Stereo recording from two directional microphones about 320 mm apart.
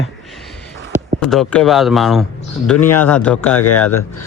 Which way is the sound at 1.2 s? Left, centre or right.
Centre.